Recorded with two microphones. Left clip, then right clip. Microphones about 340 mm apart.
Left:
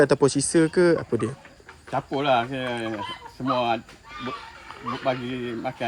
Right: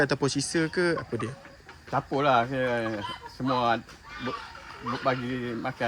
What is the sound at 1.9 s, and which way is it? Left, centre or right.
Speech, right.